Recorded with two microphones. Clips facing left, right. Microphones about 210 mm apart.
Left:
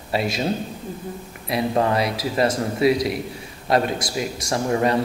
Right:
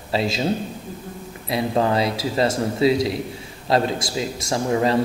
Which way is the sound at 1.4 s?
25° right (ahead or behind).